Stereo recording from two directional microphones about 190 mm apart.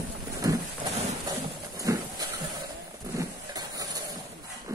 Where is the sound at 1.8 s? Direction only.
20° right (ahead or behind).